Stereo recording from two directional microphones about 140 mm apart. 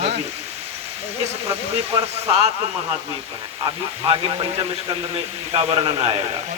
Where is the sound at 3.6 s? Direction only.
35° right (ahead or behind).